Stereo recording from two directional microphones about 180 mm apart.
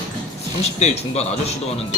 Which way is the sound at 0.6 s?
35° left (ahead or behind).